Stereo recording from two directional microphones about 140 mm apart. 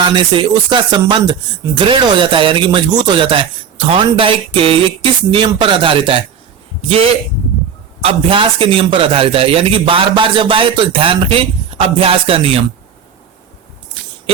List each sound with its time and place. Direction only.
0.0 s a man's voice: 35° right (ahead or behind)